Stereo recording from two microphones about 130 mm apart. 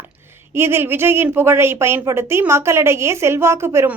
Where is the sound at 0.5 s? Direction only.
20° right (ahead or behind).